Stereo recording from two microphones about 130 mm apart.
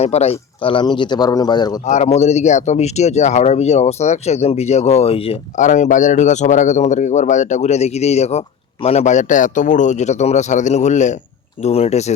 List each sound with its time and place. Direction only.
0.0 s a man's voice: 55° left (ahead or behind); by 1.8 s 30° left (ahead or behind)
1.8 s speech: 60° left (ahead or behind)
5.5 s speech: 70° left (ahead or behind)
11.6 s speech: 55° left (ahead or behind)